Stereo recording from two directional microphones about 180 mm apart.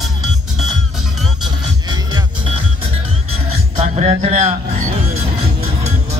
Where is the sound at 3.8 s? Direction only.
40° right (ahead or behind).